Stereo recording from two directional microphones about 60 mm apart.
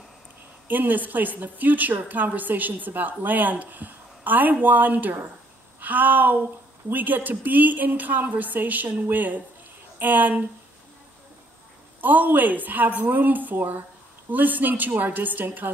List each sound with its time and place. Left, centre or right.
0.7 s a woman's voice: right
5.8 s a sound: right
6.9 s a woman's voice: right
12.0 s a woman's voice: right